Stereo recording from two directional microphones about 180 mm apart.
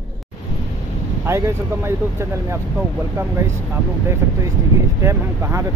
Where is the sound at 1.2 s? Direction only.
15° right (ahead or behind).